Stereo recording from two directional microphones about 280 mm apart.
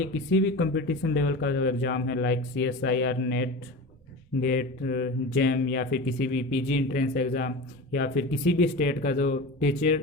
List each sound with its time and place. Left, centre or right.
0.3 s speech: left